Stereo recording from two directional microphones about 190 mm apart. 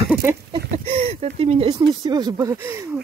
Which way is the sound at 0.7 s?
30° right (ahead or behind).